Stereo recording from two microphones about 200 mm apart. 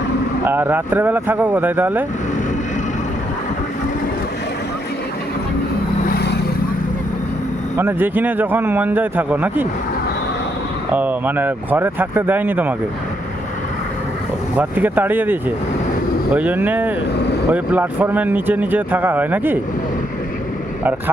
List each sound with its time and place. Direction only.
0.4 s speech: 10° right (ahead or behind)
6.1 s boat: 55° left (ahead or behind)
7.8 s speech: 10° right (ahead or behind)
10.9 s speech: 10° right (ahead or behind)
14.6 s speech: 10° right (ahead or behind)